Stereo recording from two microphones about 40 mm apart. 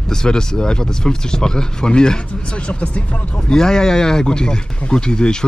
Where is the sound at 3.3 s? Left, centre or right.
Centre.